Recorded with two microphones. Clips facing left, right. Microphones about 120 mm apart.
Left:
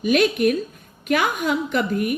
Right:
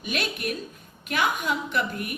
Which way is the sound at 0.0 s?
50° left (ahead or behind).